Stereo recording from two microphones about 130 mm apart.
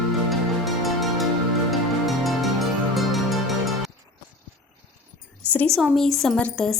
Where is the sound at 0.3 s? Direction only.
Centre (ahead or behind).